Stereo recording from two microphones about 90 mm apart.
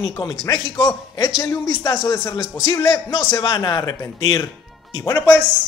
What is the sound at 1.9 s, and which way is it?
Speech, 35° left (ahead or behind).